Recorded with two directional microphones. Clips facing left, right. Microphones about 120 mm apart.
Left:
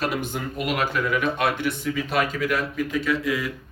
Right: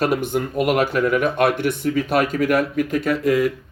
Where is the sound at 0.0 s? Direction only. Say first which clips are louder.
Right 7 dB; 50° right (ahead or behind).